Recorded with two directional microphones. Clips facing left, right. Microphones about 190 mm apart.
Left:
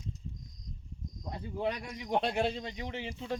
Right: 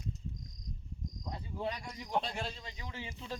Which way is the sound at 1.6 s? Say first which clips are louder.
Left 5 dB; 65° left (ahead or behind).